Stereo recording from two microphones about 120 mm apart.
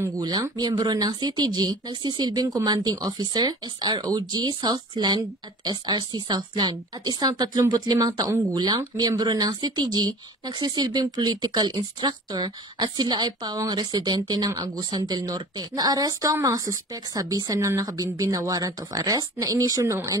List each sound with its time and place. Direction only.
0.0 s a woman's voice: 30° right (ahead or behind)